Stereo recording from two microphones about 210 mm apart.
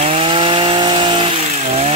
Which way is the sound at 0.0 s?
30° right (ahead or behind).